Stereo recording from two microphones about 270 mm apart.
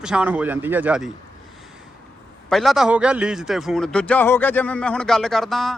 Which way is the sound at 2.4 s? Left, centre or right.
Centre.